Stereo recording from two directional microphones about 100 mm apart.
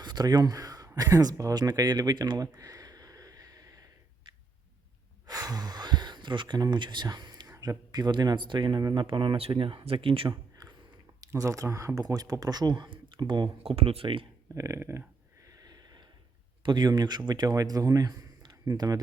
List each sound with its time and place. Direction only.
0.0 s a sound: 45° right (ahead or behind)
5.2 s a sound: 40° right (ahead or behind)
7.5 s speech: 35° right (ahead or behind); by 10.3 s 65° right (ahead or behind)
11.2 s speech: 35° right (ahead or behind); by 13.5 s 50° right (ahead or behind)
13.6 s speech: 70° right (ahead or behind)
14.5 s speech: 30° right (ahead or behind)
15.4 s snort: 40° right (ahead or behind)
16.6 s speech: 45° right (ahead or behind)